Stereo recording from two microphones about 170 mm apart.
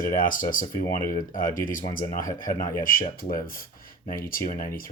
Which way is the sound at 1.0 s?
20° left (ahead or behind).